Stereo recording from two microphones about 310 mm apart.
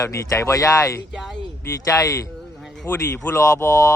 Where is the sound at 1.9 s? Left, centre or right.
Centre.